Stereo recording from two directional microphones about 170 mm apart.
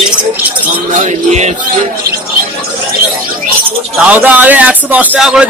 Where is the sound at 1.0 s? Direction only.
40° right (ahead or behind).